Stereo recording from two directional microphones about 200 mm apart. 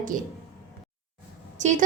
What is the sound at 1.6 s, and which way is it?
Speech, 35° right (ahead or behind).